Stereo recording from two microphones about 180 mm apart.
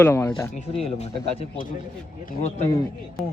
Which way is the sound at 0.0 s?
15° left (ahead or behind).